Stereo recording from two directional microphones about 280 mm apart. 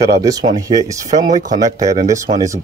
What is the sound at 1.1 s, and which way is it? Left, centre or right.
Speech, right.